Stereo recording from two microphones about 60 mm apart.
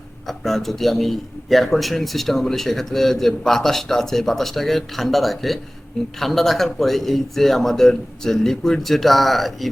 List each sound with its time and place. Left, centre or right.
0.3 s a man's voice: centre